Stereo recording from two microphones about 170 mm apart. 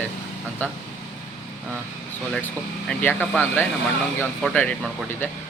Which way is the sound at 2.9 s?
10° left (ahead or behind).